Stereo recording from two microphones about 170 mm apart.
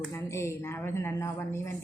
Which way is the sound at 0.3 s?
15° left (ahead or behind).